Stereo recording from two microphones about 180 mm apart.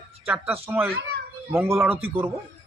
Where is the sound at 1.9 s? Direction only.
30° right (ahead or behind).